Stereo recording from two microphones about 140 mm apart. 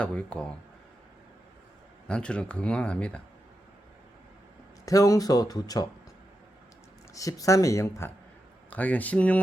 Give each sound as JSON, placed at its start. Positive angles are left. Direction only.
{"t": 0.0, "sound": "speech", "side_deg": 10}
{"t": 2.0, "sound": "speech", "side_deg": 5}
{"t": 4.9, "sound": "speech", "side_deg": 25}
{"t": 7.1, "sound": "speech", "side_deg": 25}